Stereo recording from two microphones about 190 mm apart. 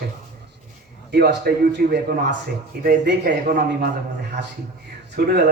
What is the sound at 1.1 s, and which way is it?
A man's voice, 55° right (ahead or behind).